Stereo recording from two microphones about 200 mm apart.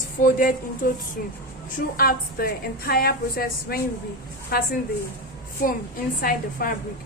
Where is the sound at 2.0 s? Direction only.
50° left (ahead or behind).